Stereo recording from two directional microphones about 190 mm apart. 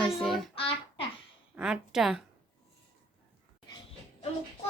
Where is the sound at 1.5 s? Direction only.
5° right (ahead or behind).